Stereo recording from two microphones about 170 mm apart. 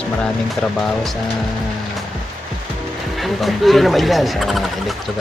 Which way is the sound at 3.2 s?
Centre (ahead or behind).